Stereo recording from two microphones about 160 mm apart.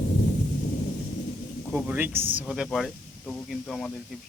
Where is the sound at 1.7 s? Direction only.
5° right (ahead or behind).